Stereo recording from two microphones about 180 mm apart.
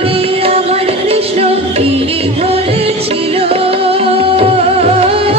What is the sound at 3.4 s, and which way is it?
Music, 30° right (ahead or behind).